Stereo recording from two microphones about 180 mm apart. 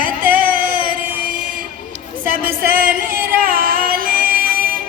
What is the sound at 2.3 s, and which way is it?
Music, 50° right (ahead or behind).